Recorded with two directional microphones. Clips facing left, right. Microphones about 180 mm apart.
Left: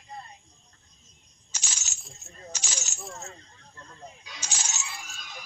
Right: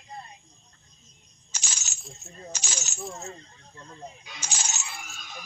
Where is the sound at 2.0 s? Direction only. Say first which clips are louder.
Right 5 dB; centre (ahead or behind).